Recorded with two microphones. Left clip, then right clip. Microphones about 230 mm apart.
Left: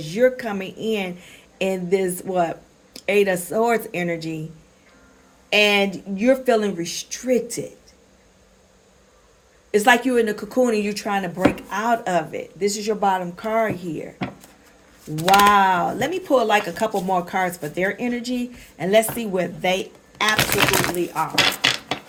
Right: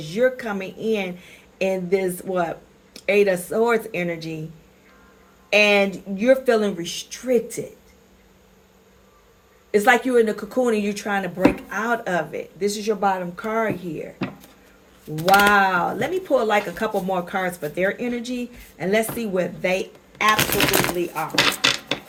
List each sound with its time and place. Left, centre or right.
0.0 s speech: left
5.8 s speech: left
9.7 s speech: left
15.1 s speech: left
20.3 s speech: centre
21.3 s cutlery: centre